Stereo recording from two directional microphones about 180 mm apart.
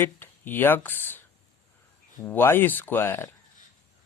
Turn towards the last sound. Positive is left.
turn(degrees=10)  # may be behind; listen again after turning